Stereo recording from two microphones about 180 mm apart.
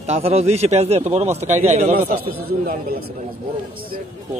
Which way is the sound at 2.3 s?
55° right (ahead or behind).